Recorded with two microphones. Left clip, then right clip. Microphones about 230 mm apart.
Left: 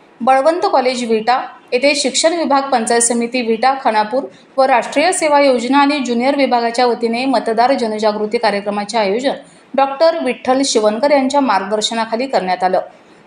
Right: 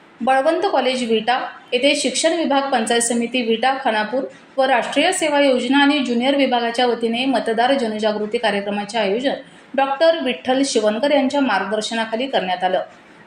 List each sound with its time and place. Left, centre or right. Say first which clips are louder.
0.3 s a woman's voice: left 5 dB; centre